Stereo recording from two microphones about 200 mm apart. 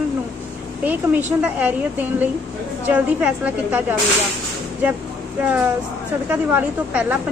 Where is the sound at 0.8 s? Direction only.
10° right (ahead or behind).